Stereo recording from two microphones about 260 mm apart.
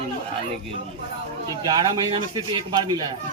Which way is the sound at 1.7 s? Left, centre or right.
Centre.